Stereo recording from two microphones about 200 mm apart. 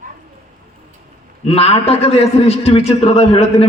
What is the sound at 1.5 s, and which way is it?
A man's voice, 30° left (ahead or behind).